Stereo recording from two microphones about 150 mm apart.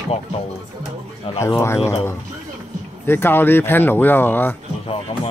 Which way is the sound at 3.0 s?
15° left (ahead or behind).